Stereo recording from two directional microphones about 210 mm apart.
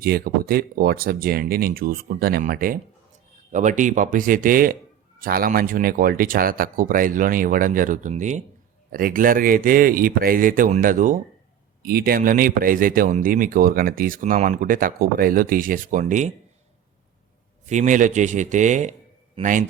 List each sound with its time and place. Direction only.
0.0 s speech: 45° right (ahead or behind)
17.7 s speech: 35° right (ahead or behind)